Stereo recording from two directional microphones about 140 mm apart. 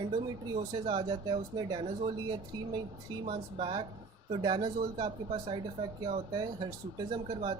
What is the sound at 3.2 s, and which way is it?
Speech, 35° right (ahead or behind).